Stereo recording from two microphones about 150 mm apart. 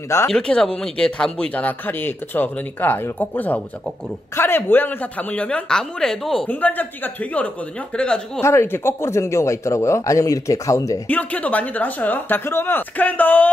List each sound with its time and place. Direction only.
0.3 s speech: 5° left (ahead or behind)
8.5 s speech: 15° left (ahead or behind)
11.1 s speech: 10° left (ahead or behind)